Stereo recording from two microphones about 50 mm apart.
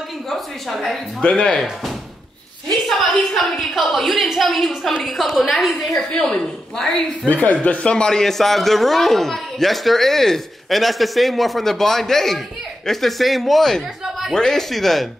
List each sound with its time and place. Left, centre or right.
1.2 s speech: centre
3.0 s a man's voice: centre
7.2 s speech: left
7.9 s a man's voice: centre